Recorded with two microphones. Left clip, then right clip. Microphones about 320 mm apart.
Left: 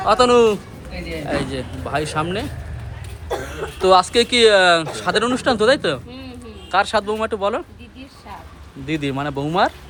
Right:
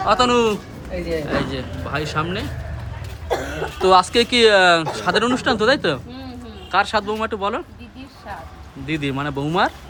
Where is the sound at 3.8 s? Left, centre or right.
Centre.